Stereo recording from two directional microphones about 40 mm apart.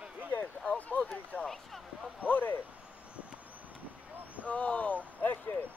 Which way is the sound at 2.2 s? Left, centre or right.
Left.